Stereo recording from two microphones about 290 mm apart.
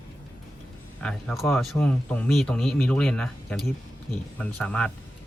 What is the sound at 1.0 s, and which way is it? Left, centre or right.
Speech, centre.